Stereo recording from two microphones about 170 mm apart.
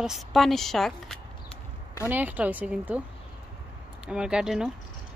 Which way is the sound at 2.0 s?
10° right (ahead or behind).